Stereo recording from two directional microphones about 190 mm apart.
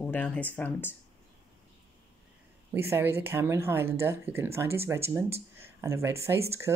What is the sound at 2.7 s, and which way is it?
Speech, 10° right (ahead or behind).